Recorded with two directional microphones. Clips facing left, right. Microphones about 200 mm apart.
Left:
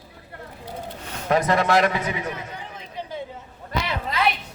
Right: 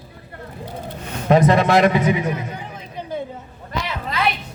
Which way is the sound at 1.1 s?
20° right (ahead or behind).